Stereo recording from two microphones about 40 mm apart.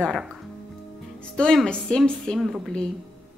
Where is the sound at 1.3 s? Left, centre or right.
Centre.